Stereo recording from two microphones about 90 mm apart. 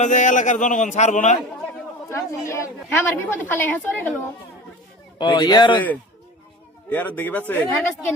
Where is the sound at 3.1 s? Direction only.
20° left (ahead or behind).